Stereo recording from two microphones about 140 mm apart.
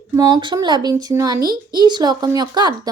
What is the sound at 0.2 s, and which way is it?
Speech, 35° right (ahead or behind).